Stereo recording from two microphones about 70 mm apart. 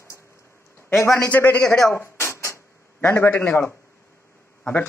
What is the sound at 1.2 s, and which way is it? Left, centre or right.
Speech, left.